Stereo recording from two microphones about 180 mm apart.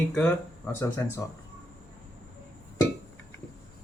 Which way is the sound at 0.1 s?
10° left (ahead or behind).